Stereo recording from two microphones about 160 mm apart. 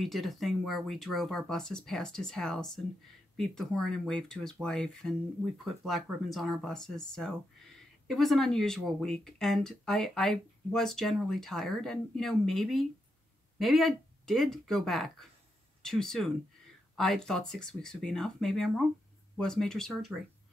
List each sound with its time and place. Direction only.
0.0 s speech: centre (ahead or behind)